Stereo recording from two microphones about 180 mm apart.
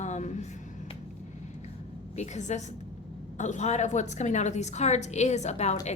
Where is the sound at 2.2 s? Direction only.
40° left (ahead or behind).